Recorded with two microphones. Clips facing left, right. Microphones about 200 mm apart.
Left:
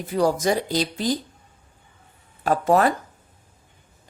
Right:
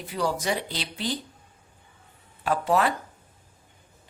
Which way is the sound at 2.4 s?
45° left (ahead or behind).